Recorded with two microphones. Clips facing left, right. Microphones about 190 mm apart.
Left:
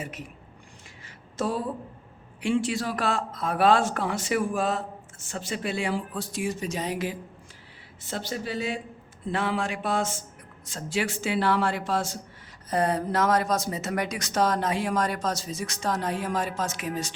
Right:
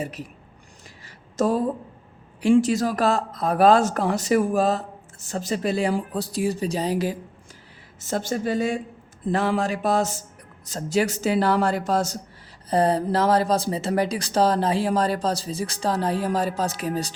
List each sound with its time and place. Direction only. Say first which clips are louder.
0.0 s speech: right 6 dB; 35° right (ahead or behind)
1.4 s speech: right 7 dB; 45° right (ahead or behind)